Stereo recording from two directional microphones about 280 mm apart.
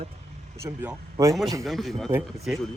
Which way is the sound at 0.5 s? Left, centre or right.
Centre.